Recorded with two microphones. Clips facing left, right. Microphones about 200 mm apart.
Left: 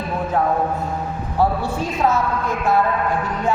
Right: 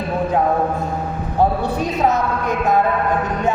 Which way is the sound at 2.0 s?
20° right (ahead or behind).